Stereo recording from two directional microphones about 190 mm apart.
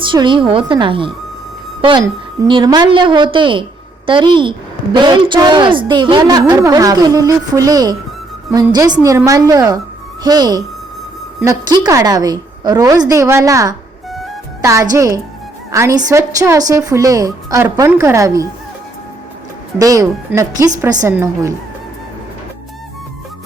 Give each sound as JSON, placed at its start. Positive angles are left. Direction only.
{"t": 0.0, "sound": "a woman's voice", "side_deg": -25}
{"t": 9.0, "sound": "a woman's voice", "side_deg": -15}
{"t": 19.8, "sound": "a woman's voice", "side_deg": -20}